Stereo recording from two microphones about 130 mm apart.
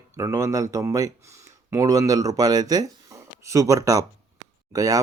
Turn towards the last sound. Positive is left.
turn(degrees=-25)  # may be behind; listen again after turning